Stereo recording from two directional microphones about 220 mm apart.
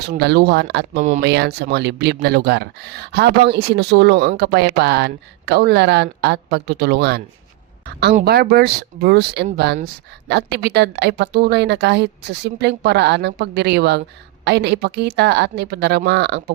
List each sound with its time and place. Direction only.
0.0 s a woman's voice: 50° right (ahead or behind)